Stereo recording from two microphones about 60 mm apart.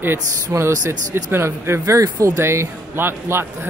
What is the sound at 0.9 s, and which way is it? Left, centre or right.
Speech, right.